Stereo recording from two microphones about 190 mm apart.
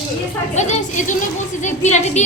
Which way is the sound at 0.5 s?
40° left (ahead or behind).